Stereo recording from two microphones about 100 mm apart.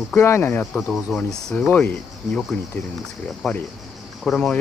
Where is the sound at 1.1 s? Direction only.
Centre (ahead or behind).